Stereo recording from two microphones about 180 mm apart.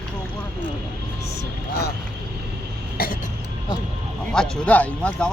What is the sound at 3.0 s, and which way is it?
Cough, 55° left (ahead or behind).